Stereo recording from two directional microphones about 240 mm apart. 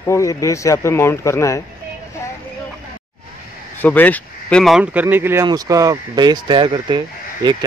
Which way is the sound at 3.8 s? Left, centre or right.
Centre.